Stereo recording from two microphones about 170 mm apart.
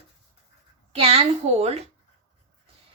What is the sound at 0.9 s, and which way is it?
Speech, 35° right (ahead or behind).